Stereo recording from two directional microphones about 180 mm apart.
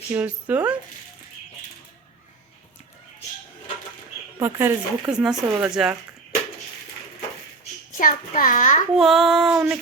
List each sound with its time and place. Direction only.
0.1 s speech: 10° right (ahead or behind)
4.4 s speech: 15° right (ahead or behind)
7.9 s a child's voice: 50° left (ahead or behind)
9.0 s child singing: centre (ahead or behind)